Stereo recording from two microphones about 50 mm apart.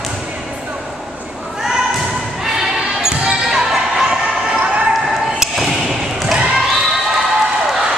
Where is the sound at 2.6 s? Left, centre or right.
Centre.